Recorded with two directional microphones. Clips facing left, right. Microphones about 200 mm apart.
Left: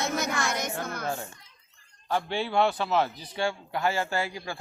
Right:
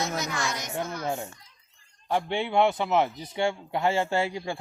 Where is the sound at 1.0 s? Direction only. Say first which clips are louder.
Right 2 dB; 20° right (ahead or behind).